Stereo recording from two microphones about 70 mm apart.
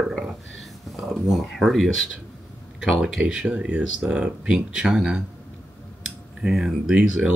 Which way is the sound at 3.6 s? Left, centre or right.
Centre.